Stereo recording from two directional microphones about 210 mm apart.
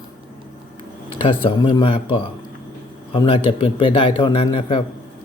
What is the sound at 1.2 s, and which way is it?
A man's voice, 25° left (ahead or behind).